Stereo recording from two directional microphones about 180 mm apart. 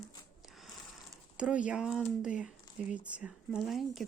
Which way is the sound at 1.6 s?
5° right (ahead or behind).